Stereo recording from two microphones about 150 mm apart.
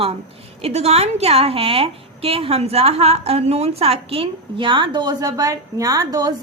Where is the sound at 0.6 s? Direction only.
45° right (ahead or behind).